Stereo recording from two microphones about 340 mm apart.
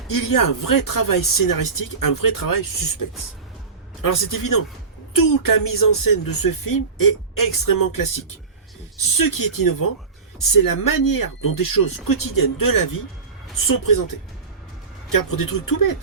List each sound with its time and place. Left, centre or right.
0.1 s speech: left
9.1 s speech: left